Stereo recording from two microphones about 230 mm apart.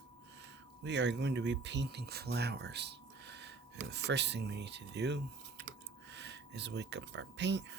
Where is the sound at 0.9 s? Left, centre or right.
Right.